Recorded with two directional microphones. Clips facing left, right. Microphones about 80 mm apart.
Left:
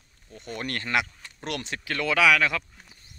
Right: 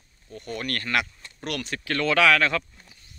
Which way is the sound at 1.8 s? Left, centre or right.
Centre.